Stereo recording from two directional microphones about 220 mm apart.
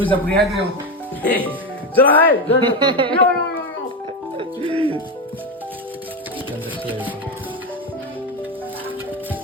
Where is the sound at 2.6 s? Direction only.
20° right (ahead or behind).